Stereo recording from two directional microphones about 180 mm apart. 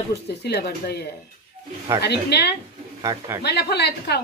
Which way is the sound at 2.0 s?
65° left (ahead or behind).